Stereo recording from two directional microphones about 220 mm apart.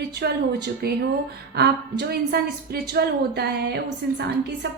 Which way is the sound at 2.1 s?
45° right (ahead or behind).